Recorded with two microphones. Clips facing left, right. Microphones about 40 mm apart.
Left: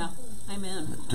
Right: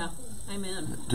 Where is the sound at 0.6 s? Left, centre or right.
Centre.